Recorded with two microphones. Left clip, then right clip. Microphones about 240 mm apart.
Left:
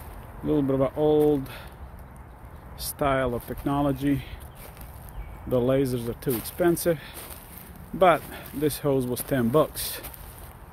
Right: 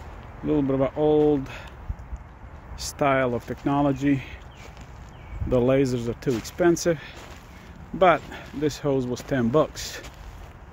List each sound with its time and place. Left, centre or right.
0.5 s speech: centre
2.8 s speech: right
5.5 s speech: right; by 10.0 s centre